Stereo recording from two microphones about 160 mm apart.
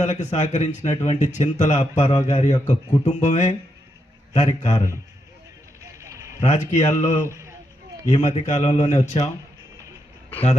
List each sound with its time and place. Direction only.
0.0 s speech: 45° left (ahead or behind)
5.8 s a sound: 20° right (ahead or behind)
6.4 s speech: 50° left (ahead or behind)